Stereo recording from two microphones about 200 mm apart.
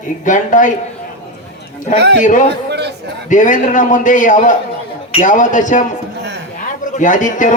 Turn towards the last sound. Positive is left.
turn(degrees=40)  # may be behind; listen again after turning